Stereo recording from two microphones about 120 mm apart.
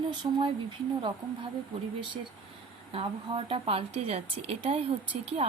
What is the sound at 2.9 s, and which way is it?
A woman's voice, 50° right (ahead or behind).